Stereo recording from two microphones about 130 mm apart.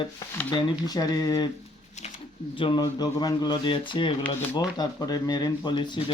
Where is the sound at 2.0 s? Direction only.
60° left (ahead or behind).